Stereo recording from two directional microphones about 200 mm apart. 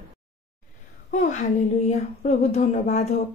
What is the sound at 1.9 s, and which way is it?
Speech, 35° left (ahead or behind).